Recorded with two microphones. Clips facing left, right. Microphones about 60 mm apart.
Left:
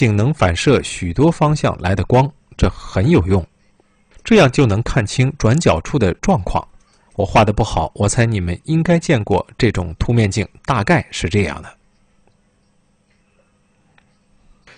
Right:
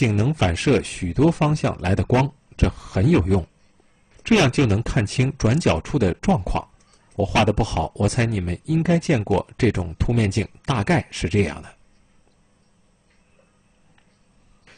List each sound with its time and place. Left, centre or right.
0.0 s speech: left
14.7 s beatboxing: left